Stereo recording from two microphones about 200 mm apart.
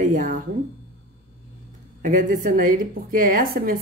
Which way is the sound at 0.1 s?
40° right (ahead or behind).